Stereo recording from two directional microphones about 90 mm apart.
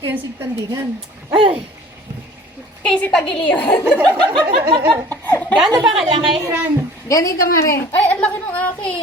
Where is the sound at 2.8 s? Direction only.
10° left (ahead or behind).